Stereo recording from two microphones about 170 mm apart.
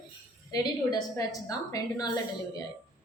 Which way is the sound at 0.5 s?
20° left (ahead or behind).